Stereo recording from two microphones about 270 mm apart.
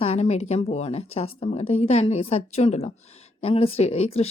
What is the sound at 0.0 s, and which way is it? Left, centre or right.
Speech, left.